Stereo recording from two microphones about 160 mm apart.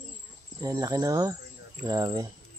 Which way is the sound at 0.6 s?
25° right (ahead or behind).